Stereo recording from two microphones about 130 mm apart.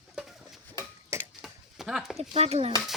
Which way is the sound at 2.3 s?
55° right (ahead or behind).